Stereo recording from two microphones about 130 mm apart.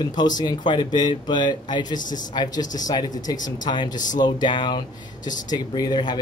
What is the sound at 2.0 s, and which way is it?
Speech, 85° left.